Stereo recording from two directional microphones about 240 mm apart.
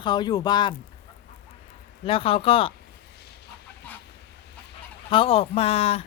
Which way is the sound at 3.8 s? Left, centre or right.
Centre.